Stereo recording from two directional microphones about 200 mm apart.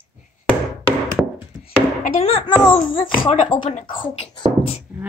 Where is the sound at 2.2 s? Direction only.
30° left (ahead or behind).